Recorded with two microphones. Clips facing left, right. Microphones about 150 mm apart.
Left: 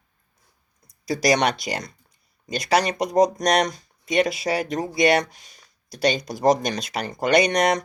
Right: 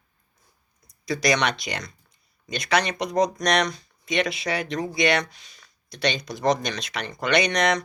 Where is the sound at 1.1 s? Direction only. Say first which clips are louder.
Left 3 dB; 40° left (ahead or behind).